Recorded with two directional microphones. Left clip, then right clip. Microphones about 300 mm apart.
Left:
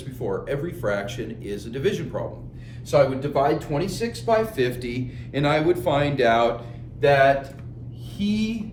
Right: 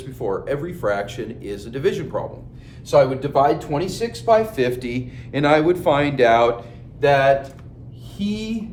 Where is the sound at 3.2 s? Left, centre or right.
Centre.